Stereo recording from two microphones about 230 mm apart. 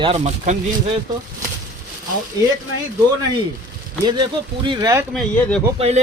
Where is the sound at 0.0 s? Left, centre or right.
Right.